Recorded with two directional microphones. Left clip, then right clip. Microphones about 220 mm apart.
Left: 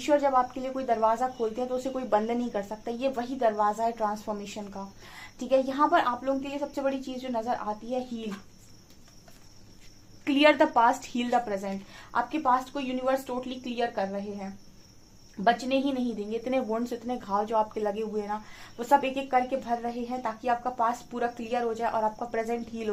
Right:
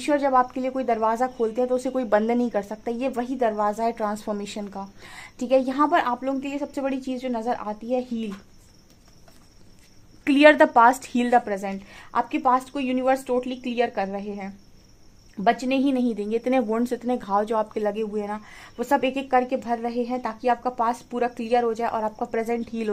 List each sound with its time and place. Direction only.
0.0 s speech: 40° right (ahead or behind)
10.2 s a woman's voice: 40° right (ahead or behind)
15.4 s a woman's voice: 40° right (ahead or behind)